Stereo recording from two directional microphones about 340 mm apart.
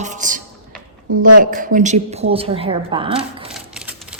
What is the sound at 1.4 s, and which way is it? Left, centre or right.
A woman's voice, right.